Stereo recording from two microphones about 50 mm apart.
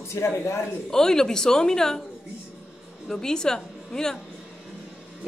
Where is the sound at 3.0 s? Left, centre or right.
Centre.